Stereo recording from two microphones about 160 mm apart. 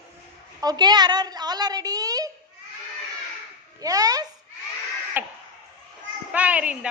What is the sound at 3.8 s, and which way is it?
Speech, 25° right (ahead or behind).